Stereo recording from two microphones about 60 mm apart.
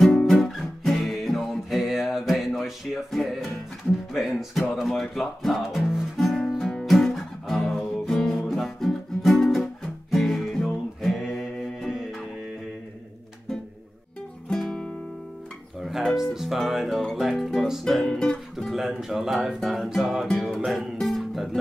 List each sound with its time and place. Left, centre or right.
0.1 s music: centre
4.8 s a sound: centre
5.2 s music: centre
14.5 s music: centre
18.7 s music: centre